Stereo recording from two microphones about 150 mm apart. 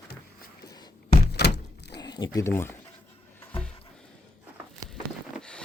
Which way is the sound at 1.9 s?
25° left (ahead or behind).